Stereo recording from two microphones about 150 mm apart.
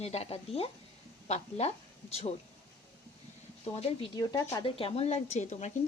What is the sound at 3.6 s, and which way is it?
Speech, 40° left (ahead or behind).